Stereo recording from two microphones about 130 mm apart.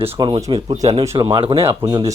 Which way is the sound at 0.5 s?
55° right (ahead or behind).